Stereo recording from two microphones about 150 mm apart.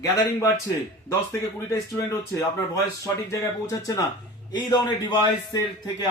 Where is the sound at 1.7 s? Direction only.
20° left (ahead or behind).